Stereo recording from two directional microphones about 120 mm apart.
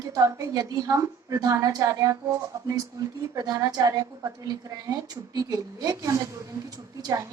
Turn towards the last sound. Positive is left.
turn(degrees=-25)  # may be behind; listen again after turning